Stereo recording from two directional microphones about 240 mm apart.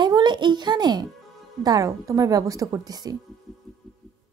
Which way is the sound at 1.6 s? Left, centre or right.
Centre.